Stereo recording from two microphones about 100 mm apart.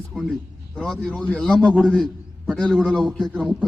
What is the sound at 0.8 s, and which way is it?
A man's voice, 10° left (ahead or behind).